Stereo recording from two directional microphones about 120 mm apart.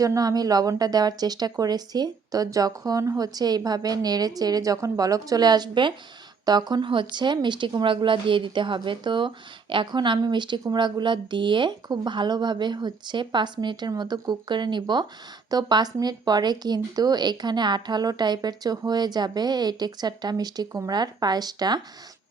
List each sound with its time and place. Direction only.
0.0 s speech: 30° right (ahead or behind)